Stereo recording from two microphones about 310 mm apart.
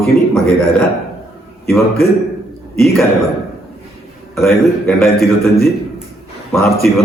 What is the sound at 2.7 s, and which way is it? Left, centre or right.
Speech, centre.